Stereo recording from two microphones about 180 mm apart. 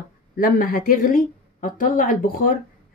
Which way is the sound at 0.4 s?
50° left (ahead or behind).